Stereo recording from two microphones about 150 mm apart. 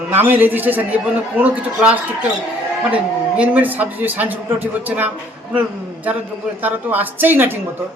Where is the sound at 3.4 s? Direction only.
10° right (ahead or behind).